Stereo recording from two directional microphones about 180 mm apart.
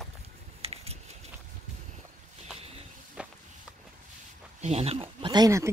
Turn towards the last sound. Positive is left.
turn(degrees=-15)  # may be behind; listen again after turning